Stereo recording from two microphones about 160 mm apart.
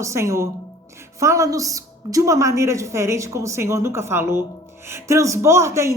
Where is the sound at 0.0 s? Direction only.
20° right (ahead or behind).